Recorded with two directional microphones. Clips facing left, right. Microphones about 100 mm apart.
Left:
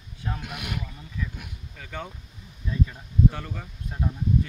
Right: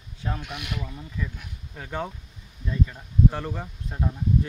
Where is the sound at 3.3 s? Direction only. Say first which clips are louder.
Right 5 dB; 35° right (ahead or behind).